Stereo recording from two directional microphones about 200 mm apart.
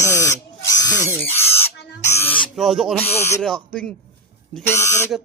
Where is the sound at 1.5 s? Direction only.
10° left (ahead or behind).